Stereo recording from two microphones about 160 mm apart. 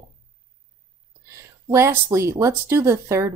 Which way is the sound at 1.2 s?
15° right (ahead or behind).